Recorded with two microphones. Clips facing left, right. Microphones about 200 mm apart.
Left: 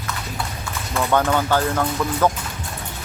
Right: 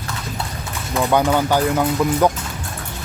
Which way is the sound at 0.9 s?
15° right (ahead or behind).